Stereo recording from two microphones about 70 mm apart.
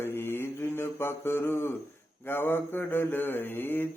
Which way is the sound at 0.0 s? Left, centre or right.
Left.